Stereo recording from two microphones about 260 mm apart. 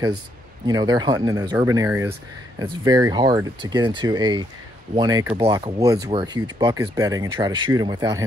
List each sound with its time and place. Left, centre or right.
0.7 s speech: centre